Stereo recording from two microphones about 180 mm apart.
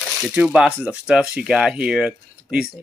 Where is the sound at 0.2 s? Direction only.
5° right (ahead or behind).